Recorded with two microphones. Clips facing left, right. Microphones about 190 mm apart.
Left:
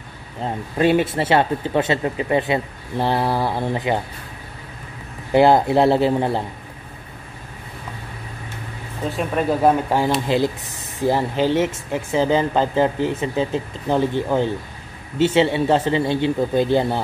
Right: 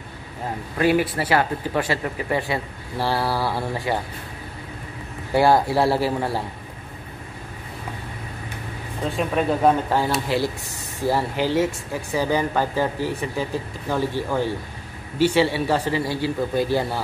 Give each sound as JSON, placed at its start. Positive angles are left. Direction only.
{"t": 0.4, "sound": "speech", "side_deg": 25}
{"t": 5.3, "sound": "speech", "side_deg": 20}
{"t": 9.1, "sound": "speech", "side_deg": 10}